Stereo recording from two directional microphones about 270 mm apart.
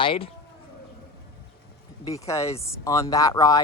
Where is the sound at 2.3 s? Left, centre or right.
Centre.